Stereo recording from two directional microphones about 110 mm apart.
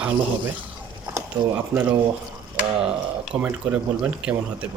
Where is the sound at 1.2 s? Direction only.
20° right (ahead or behind).